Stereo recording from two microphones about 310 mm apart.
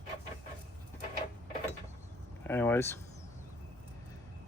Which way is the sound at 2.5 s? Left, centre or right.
Centre.